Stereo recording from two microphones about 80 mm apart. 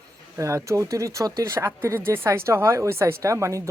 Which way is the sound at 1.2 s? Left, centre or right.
Right.